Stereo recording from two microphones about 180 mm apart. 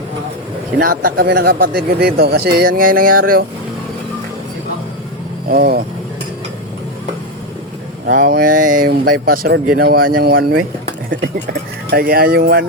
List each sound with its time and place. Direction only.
0.8 s speech: 55° right (ahead or behind)
5.5 s speech: 55° right (ahead or behind)
8.0 s speech: 50° right (ahead or behind)
11.9 s speech: 55° right (ahead or behind)